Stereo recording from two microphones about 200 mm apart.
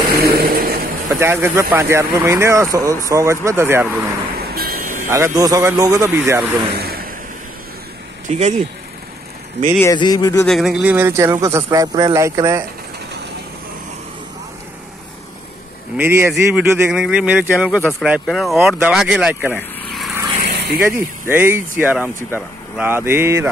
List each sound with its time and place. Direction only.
0.1 s vehicle: 50° right (ahead or behind)
1.0 s speech: 15° right (ahead or behind)
4.4 s vehicle: 50° right (ahead or behind)
5.0 s speech: 15° right (ahead or behind)
6.7 s vehicle: 50° right (ahead or behind)
9.8 s speech: 20° left (ahead or behind)
10.4 s speech: centre (ahead or behind)
16.0 s speech: 15° right (ahead or behind)
19.5 s vehicle: centre (ahead or behind)
20.5 s vehicle: 55° right (ahead or behind)
20.8 s speech: 10° right (ahead or behind)